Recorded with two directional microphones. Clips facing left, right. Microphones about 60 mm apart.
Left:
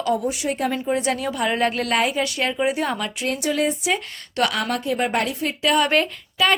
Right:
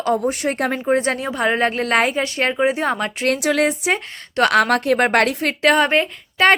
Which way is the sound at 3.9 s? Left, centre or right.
Right.